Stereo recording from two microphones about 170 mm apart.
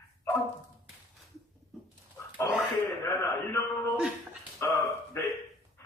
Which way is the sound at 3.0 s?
15° left (ahead or behind).